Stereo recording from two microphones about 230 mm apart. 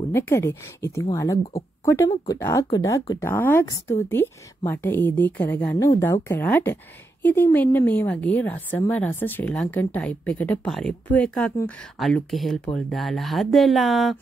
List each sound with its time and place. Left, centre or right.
0.1 s a woman's voice: centre